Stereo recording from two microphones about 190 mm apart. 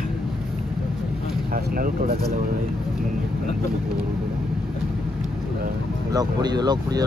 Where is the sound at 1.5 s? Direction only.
50° right (ahead or behind).